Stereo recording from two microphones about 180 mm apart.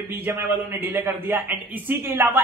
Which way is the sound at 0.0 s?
10° right (ahead or behind).